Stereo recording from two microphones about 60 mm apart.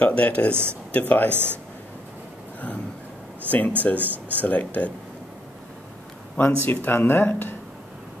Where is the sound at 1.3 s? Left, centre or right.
Right.